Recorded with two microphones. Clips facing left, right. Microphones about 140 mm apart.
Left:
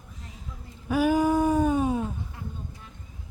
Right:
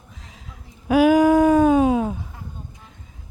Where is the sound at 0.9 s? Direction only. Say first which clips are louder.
Right 8 dB; 90° right.